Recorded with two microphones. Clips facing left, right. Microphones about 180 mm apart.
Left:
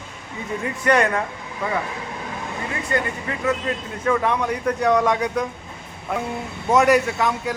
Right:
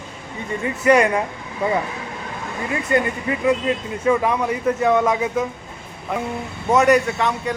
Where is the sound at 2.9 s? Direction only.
15° right (ahead or behind).